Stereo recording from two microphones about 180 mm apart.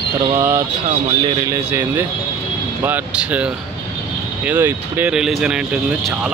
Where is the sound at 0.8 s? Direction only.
25° right (ahead or behind).